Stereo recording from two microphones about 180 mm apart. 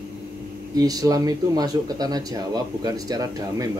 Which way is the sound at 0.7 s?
20° right (ahead or behind).